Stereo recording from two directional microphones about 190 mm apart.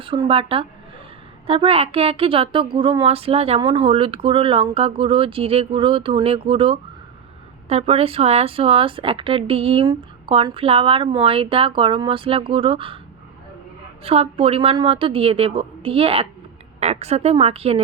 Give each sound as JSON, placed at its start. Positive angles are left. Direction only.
{"t": 0.0, "sound": "a woman's voice", "side_deg": -30}
{"t": 14.0, "sound": "a woman's voice", "side_deg": -30}